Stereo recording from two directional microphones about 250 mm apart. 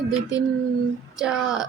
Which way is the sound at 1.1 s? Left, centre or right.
Centre.